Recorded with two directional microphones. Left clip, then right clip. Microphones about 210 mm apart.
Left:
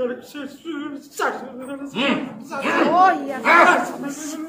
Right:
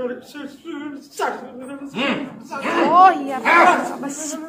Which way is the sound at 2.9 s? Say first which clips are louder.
Right 5 dB; 45° right (ahead or behind).